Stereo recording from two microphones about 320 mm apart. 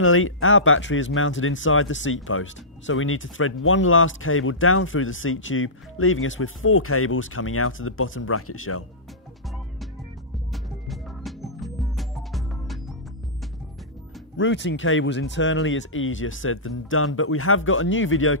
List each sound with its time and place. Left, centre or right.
0.0 s speech: left
10.5 s music: centre
14.3 s speech: left